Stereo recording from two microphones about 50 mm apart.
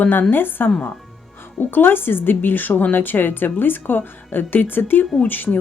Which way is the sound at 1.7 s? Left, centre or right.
Left.